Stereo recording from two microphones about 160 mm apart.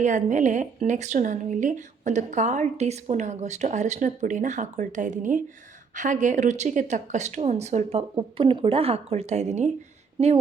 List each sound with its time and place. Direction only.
0.0 s speech: 50° right (ahead or behind)
10.2 s speech: 35° right (ahead or behind)